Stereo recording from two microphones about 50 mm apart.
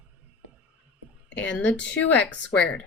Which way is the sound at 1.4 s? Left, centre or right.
Left.